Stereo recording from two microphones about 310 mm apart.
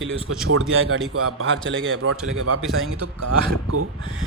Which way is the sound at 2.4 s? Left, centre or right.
Right.